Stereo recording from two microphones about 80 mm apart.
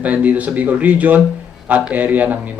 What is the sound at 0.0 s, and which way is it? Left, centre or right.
A man's voice, centre.